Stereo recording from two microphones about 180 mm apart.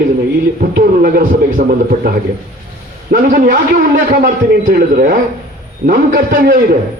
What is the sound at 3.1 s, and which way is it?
A man's voice, 50° right (ahead or behind).